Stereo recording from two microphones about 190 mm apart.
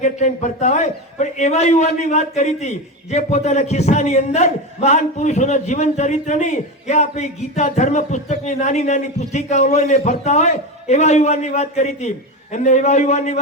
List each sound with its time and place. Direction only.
0.0 s a man's voice: 40° left (ahead or behind)